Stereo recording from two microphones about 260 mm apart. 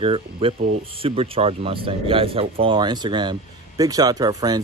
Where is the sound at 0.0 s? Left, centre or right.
Right.